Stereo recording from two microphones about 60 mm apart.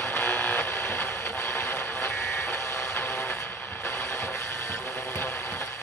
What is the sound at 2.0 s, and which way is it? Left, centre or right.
Vehicle, left.